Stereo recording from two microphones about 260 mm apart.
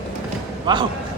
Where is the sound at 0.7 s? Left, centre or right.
Centre.